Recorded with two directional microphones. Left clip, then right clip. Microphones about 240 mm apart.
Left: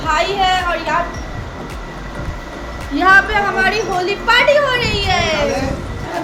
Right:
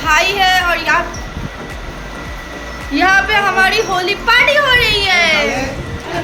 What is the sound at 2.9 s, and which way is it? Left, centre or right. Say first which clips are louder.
A woman's voice: even; centre.